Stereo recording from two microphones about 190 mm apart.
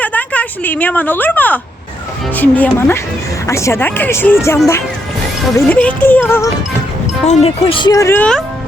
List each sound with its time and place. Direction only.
0.0 s a woman's voice: 10° left (ahead or behind)
7.3 s speech: 30° left (ahead or behind); by 8.4 s 10° left (ahead or behind)